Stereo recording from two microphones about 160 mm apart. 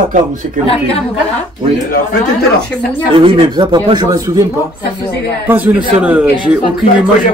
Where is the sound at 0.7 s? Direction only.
35° left (ahead or behind).